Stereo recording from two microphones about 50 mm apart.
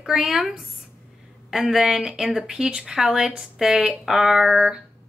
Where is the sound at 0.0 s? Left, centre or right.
Centre.